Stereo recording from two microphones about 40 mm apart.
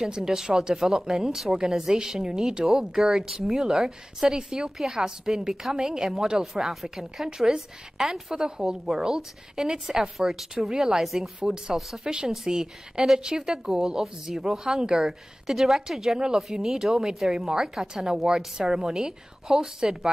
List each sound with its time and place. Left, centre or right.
0.1 s a woman's voice: centre